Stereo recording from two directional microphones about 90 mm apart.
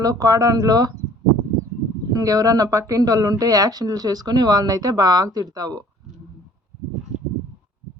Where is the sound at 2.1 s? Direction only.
40° right (ahead or behind).